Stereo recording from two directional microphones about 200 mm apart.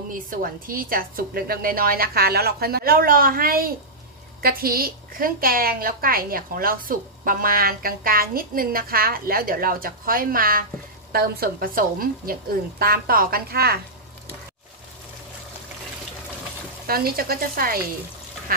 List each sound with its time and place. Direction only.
0.1 s a woman's voice: 45° right (ahead or behind)
16.8 s a woman's voice: 50° right (ahead or behind)